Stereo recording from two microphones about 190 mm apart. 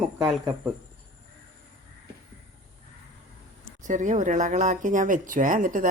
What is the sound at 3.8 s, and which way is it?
Speech, 40° right (ahead or behind).